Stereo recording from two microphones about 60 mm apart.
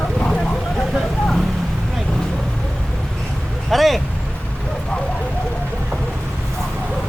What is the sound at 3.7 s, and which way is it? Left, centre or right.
Speech, centre.